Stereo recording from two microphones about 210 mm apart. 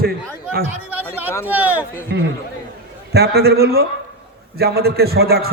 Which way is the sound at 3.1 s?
50° right (ahead or behind).